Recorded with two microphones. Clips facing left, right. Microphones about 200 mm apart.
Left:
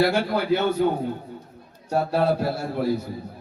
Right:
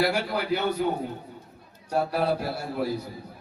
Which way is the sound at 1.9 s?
25° left (ahead or behind).